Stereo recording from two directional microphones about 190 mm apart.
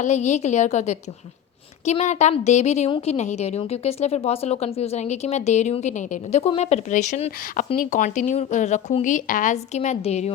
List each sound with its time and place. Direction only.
0.0 s a woman's voice: 40° left (ahead or behind)